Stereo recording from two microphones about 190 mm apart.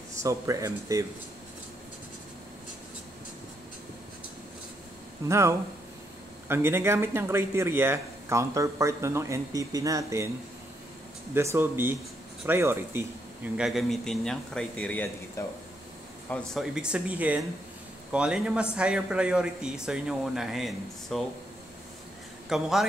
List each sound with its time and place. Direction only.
0.2 s speech: 15° right (ahead or behind)
5.3 s speech: 15° right (ahead or behind)
11.3 s speech: 10° right (ahead or behind)
13.6 s a man's voice: centre (ahead or behind)
16.3 s a man's voice: centre (ahead or behind)
22.5 s a man's voice: centre (ahead or behind)